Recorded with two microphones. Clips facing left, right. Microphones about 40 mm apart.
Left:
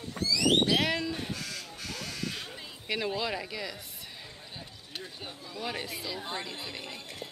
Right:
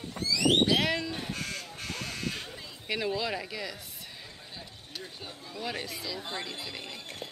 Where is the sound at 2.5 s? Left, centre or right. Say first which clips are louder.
Even; centre.